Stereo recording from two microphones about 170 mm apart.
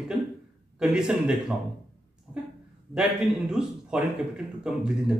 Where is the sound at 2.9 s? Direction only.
5° right (ahead or behind).